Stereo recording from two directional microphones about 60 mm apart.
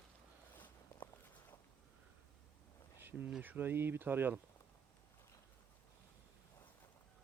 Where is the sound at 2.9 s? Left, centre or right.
Right.